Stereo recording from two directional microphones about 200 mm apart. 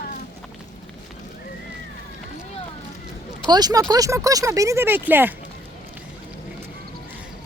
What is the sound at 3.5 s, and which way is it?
Speech, 20° right (ahead or behind).